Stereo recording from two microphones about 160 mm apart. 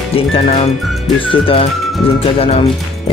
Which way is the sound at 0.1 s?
40° left (ahead or behind).